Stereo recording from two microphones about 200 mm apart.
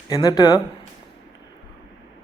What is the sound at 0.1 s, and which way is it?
Speech, 20° left (ahead or behind).